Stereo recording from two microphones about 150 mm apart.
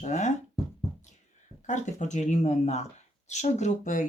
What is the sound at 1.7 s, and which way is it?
Speech, 55° left (ahead or behind).